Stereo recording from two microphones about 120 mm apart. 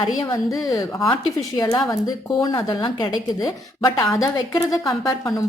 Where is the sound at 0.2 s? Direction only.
30° left (ahead or behind).